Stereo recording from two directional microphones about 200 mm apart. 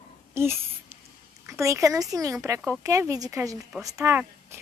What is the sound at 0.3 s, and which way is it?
Babbling, 10° right (ahead or behind).